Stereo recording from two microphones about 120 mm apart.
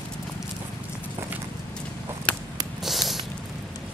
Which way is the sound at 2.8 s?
Centre (ahead or behind).